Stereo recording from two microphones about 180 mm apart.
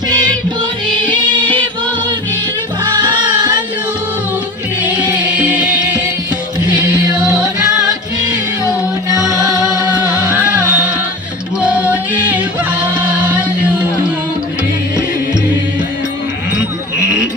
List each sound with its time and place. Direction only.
1.0 s music: 25° right (ahead or behind)
2.8 s music: 25° right (ahead or behind)
5.1 s music: 10° right (ahead or behind)
7.0 s music: 20° right (ahead or behind)
7.3 s music: 5° right (ahead or behind)
10.1 s music: 5° right (ahead or behind)
13.0 s chant: 10° right (ahead or behind)